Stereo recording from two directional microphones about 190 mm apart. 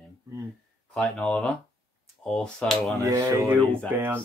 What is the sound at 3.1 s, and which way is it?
Speech, 15° right (ahead or behind).